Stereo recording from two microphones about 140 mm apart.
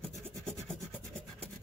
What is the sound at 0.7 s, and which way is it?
Rub, 5° left (ahead or behind).